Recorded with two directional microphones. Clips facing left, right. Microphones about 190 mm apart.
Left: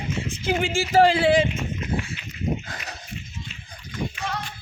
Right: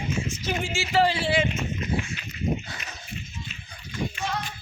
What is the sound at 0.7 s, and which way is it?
Speech, 45° left (ahead or behind).